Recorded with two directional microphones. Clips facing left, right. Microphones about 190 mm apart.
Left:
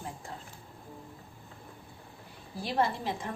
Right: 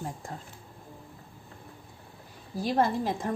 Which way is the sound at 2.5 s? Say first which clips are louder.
Right 4 dB; 40° right (ahead or behind).